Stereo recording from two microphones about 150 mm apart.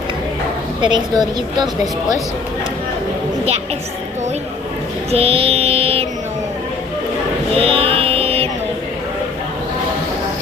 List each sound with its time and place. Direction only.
0.8 s a woman's voice: 30° right (ahead or behind)
5.1 s music: 40° right (ahead or behind)
7.5 s music: 40° right (ahead or behind)